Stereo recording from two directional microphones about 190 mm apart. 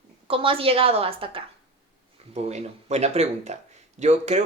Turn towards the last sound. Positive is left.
turn(degrees=-35)  # may be behind; listen again after turning